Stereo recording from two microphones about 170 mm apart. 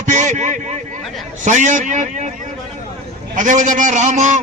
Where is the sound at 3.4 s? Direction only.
45° right (ahead or behind).